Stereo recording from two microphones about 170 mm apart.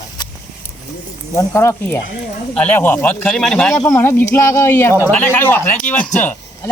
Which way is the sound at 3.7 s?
15° left (ahead or behind).